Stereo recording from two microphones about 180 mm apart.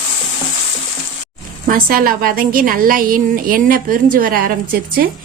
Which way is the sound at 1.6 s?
50° right (ahead or behind).